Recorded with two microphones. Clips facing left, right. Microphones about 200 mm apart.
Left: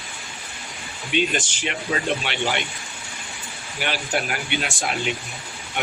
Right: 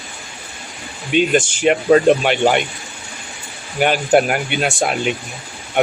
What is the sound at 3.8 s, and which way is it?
Speech, 50° right (ahead or behind).